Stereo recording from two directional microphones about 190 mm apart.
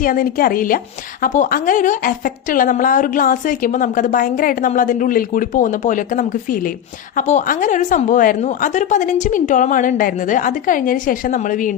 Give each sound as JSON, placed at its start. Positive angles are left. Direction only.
{"t": 0.0, "sound": "a woman's voice", "side_deg": 45}